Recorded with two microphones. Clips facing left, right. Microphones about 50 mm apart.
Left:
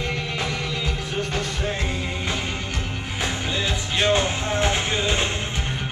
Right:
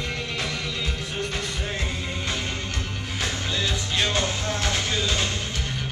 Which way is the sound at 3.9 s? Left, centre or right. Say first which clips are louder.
Left 5 dB; left.